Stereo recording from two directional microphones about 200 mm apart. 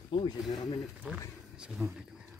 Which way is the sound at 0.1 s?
25° left (ahead or behind).